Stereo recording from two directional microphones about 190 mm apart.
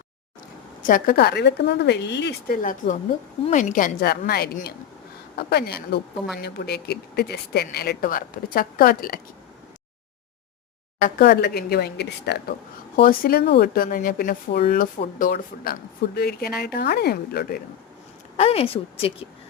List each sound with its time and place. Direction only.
0.8 s speech: 45° left (ahead or behind); by 2.6 s 65° left (ahead or behind)
2.6 s speech: 45° left (ahead or behind)
11.0 s speech: 50° left (ahead or behind)
13.0 s speech: 50° left (ahead or behind)
18.3 s speech: 30° left (ahead or behind)